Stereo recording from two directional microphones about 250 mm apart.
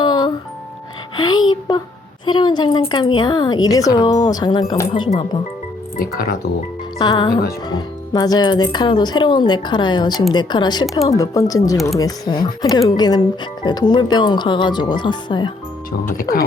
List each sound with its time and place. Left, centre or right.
0.0 s music: centre
1.1 s a woman's voice: centre
6.0 s speech: left
7.0 s a woman's voice: centre
15.9 s speech: left